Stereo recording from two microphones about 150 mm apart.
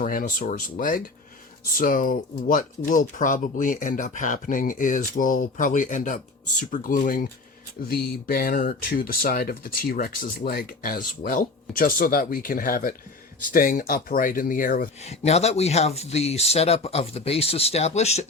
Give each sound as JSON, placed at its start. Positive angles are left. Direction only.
{"t": 0.0, "sound": "speech", "side_deg": 70}
{"t": 15.0, "sound": "speech", "side_deg": 45}